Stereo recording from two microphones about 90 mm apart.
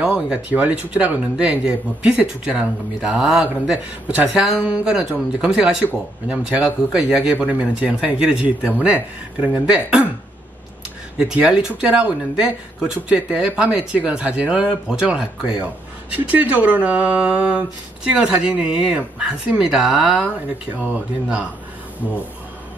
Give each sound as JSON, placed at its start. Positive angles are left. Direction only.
{"t": 0.0, "sound": "speech", "side_deg": -10}
{"t": 11.1, "sound": "speech", "side_deg": -10}